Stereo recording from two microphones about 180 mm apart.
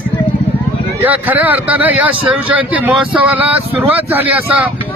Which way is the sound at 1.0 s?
10° right (ahead or behind).